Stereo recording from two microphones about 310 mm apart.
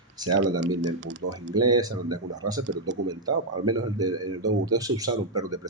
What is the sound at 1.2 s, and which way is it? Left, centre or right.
Speech, right.